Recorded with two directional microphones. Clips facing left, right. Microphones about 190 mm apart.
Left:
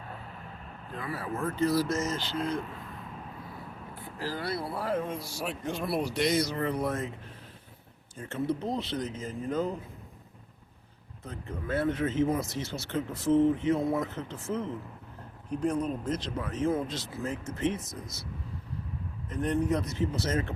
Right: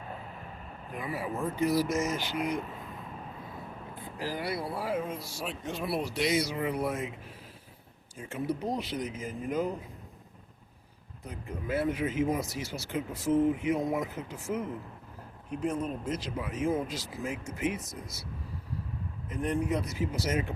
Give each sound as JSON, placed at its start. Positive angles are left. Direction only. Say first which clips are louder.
{"t": 0.9, "sound": "speech", "louder": "right 1 dB", "side_deg": -15}
{"t": 3.9, "sound": "speech", "louder": "even", "side_deg": -15}
{"t": 8.2, "sound": "speech", "louder": "left 2 dB", "side_deg": -10}
{"t": 11.3, "sound": "speech", "louder": "even", "side_deg": -10}
{"t": 19.3, "sound": "speech", "louder": "left 2 dB", "side_deg": -5}